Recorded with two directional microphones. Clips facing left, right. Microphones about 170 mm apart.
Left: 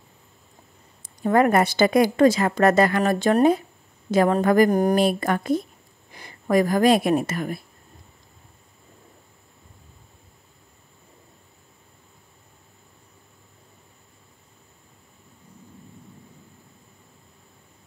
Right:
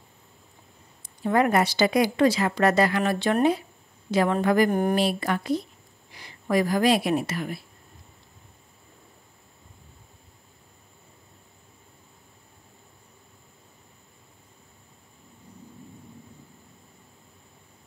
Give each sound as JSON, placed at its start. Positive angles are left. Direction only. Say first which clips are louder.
{"t": 1.0, "sound": "speech", "louder": "left 4 dB", "side_deg": 50}